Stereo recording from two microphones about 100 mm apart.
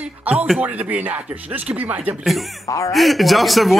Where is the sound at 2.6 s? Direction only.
30° left (ahead or behind).